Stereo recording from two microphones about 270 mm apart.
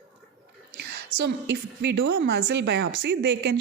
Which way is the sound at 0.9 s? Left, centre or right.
Right.